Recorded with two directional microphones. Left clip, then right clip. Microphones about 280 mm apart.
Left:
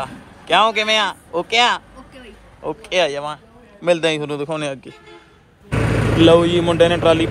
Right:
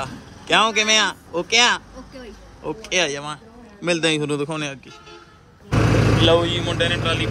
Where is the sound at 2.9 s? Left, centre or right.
Centre.